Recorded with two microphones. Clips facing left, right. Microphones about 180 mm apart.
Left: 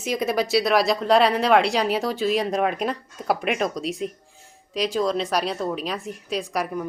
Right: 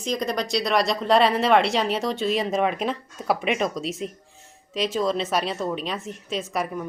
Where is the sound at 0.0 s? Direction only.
5° left (ahead or behind).